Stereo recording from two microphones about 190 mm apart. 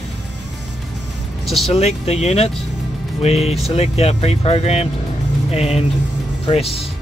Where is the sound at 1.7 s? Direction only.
35° left (ahead or behind).